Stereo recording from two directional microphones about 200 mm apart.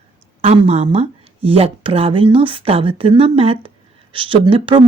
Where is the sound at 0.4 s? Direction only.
30° right (ahead or behind).